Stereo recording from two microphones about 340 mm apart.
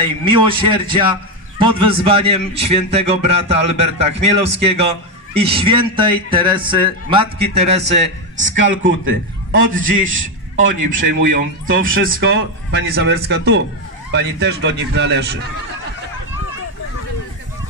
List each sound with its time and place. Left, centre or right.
0.0 s a man's voice: centre
8.4 s speech: right
9.7 s a man's voice: right
11.6 s a man's voice: right